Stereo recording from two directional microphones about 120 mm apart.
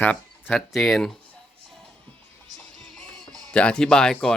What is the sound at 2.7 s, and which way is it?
Music, 5° left (ahead or behind).